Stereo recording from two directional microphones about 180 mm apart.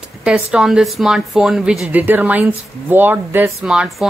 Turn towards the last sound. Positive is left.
turn(degrees=-5)  # may be behind; listen again after turning